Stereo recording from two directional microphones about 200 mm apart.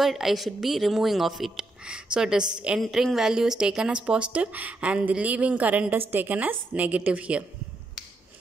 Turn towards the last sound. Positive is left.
turn(degrees=-5)  # may be behind; listen again after turning